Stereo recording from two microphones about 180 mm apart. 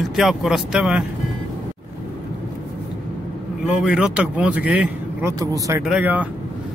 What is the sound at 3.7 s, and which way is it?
Speech, 5° right (ahead or behind).